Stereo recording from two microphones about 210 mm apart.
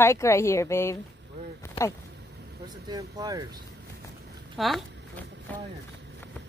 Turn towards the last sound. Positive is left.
turn(degrees=5)  # may be behind; listen again after turning